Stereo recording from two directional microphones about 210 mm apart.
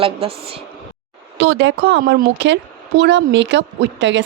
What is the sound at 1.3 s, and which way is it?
A woman's voice, 55° right (ahead or behind).